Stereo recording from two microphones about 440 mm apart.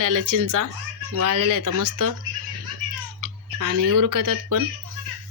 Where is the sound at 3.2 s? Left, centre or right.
Right.